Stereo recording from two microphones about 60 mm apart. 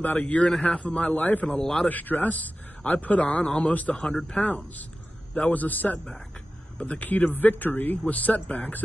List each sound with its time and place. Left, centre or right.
0.0 s a man's voice: left
0.5 s speech: centre
0.7 s a man's voice: centre
1.6 s speech: centre
1.9 s a man's voice: left
3.9 s speech: centre
4.4 s a man's voice: left